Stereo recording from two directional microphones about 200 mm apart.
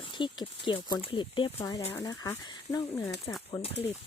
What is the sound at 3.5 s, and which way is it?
Speech, 30° left (ahead or behind).